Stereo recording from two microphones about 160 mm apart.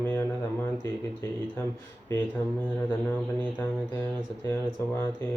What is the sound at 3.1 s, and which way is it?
Speech, 10° left (ahead or behind).